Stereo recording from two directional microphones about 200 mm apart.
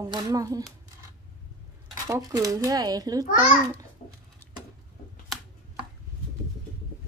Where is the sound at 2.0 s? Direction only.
15° right (ahead or behind).